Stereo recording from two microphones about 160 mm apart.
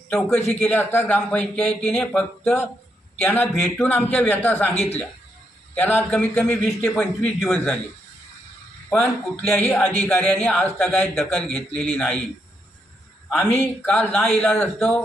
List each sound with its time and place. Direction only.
0.6 s speech: 10° left (ahead or behind)
4.7 s speech: 40° left (ahead or behind)
5.7 s a man's voice: 10° left (ahead or behind)
8.9 s speech: 10° left (ahead or behind)
13.6 s a man's voice: 10° left (ahead or behind)